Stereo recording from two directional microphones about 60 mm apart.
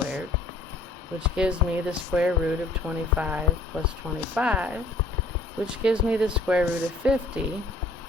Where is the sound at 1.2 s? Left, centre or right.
Centre.